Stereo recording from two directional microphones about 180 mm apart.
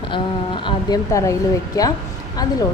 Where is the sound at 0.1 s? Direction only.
25° left (ahead or behind).